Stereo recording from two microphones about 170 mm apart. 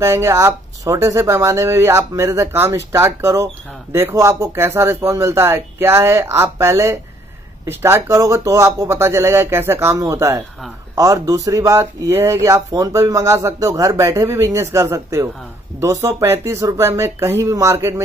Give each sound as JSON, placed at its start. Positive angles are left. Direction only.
{"t": 0.0, "sound": "speech", "side_deg": -15}